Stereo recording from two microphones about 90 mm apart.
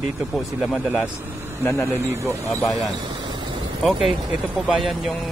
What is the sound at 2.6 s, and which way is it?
Speech, centre (ahead or behind).